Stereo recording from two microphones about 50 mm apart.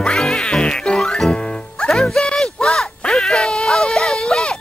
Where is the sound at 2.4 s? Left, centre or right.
Centre.